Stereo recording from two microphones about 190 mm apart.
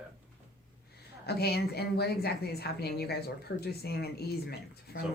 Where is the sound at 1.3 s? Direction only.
55° left (ahead or behind).